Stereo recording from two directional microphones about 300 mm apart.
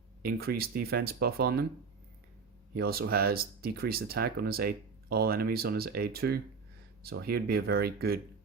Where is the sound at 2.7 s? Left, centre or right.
Right.